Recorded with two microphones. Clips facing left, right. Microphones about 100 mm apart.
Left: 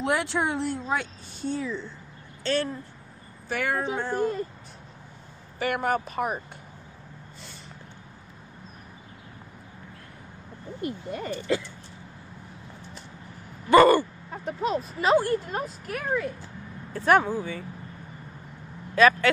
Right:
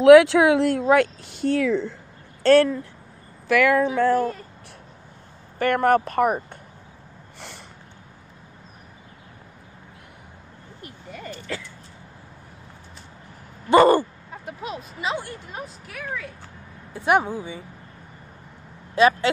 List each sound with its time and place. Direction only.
0.0 s speech: 90° right
2.4 s speech: 60° right (ahead or behind)
3.4 s speech: 90° right
5.6 s speech: 50° right (ahead or behind)
7.3 s snort: 70° right (ahead or behind)
11.2 s speech: 20° left (ahead or behind)
13.7 s speech: 25° right (ahead or behind)
15.0 s speech: 45° left (ahead or behind)
16.9 s speech: 15° right (ahead or behind)
18.9 s speech: 25° right (ahead or behind)